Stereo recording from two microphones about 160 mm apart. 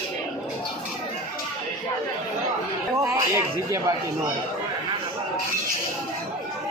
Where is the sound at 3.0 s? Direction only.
20° right (ahead or behind).